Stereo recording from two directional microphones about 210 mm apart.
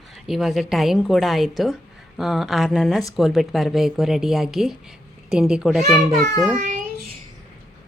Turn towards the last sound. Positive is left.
turn(degrees=-35)  # may be behind; listen again after turning